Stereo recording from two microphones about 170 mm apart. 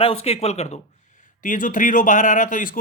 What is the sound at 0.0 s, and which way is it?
Speech, 35° left (ahead or behind).